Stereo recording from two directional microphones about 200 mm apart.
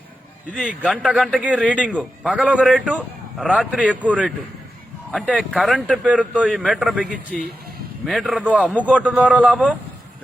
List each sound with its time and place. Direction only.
0.5 s a man's voice: 5° right (ahead or behind)